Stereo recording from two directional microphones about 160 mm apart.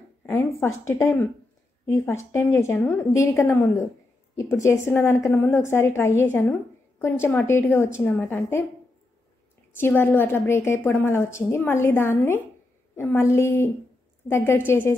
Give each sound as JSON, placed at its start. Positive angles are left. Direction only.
{"t": 0.3, "sound": "a woman's voice", "side_deg": 15}
{"t": 9.8, "sound": "a woman's voice", "side_deg": 15}